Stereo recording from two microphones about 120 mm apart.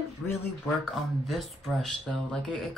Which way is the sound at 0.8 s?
Centre (ahead or behind).